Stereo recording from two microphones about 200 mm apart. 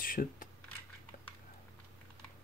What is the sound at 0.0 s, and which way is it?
Computer keyboard, 45° left (ahead or behind).